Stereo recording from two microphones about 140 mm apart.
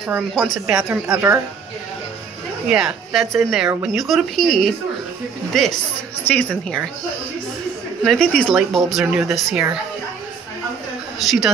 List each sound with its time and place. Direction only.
0.3 s speech: centre (ahead or behind)
1.0 s a woman's voice: 20° right (ahead or behind)
2.7 s a woman's voice: centre (ahead or behind)
8.0 s speech: 5° left (ahead or behind)
9.0 s speech: 10° right (ahead or behind)
11.1 s speech: centre (ahead or behind)